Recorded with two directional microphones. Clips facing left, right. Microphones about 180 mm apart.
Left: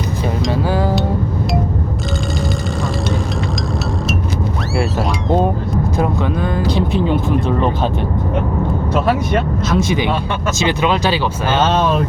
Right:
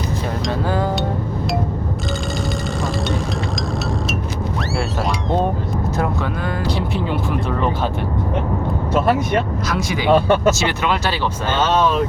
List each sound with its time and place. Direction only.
0.7 s music: 5° left (ahead or behind)
6.7 s music: 20° left (ahead or behind)
9.6 s speech: 25° left (ahead or behind)